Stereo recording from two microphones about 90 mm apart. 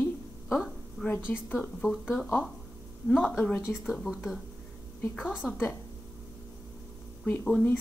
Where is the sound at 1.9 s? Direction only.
Centre (ahead or behind).